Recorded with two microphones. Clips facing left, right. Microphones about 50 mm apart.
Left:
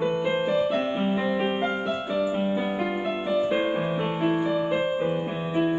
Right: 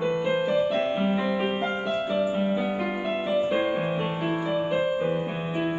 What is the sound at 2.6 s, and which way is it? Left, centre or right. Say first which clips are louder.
Music: left 1 dB; centre.